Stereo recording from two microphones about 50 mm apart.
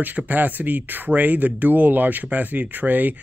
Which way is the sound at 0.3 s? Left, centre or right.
Right.